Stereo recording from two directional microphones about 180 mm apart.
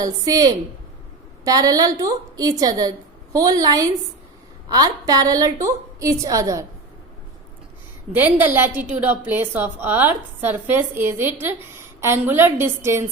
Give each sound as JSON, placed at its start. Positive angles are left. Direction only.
{"t": 0.0, "sound": "a woman's voice", "side_deg": -20}
{"t": 8.1, "sound": "a woman's voice", "side_deg": -10}